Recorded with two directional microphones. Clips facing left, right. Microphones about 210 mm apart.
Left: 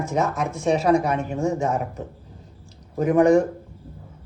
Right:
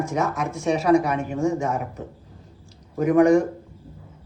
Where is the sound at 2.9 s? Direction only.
25° left (ahead or behind).